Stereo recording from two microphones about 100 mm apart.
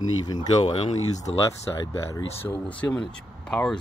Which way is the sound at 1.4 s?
30° left (ahead or behind).